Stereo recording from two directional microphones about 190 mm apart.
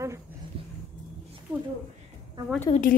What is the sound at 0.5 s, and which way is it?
Roaring cats, 30° right (ahead or behind).